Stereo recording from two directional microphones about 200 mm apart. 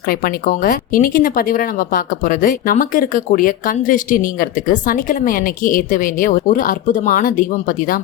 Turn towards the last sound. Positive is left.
turn(degrees=40)  # may be behind; listen again after turning